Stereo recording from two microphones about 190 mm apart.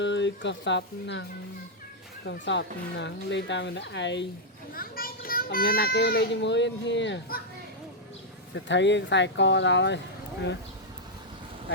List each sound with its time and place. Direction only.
0.0 s speech: 70° left (ahead or behind)
2.2 s speech: 65° left (ahead or behind)
4.7 s a child's voice: 50° left (ahead or behind)
8.5 s speech: 70° left (ahead or behind)